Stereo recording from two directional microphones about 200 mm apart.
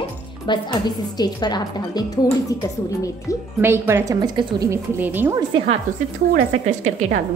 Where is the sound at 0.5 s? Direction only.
20° left (ahead or behind).